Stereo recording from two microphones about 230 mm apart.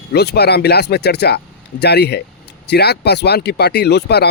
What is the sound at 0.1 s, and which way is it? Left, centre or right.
Speech, left.